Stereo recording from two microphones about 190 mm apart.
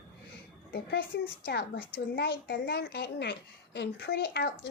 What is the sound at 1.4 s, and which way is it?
A woman's voice, 55° left (ahead or behind).